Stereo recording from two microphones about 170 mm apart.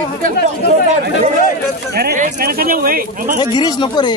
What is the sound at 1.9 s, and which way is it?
Speech, 60° right (ahead or behind).